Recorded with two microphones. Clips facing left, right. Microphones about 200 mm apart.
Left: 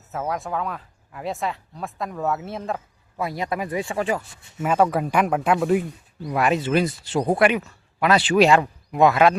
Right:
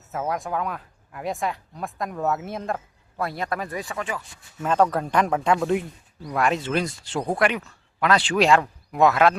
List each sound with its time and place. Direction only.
0.1 s speech: centre (ahead or behind); by 3.9 s 20° left (ahead or behind)
3.9 s speech: 35° left (ahead or behind)
4.6 s speech: 10° left (ahead or behind)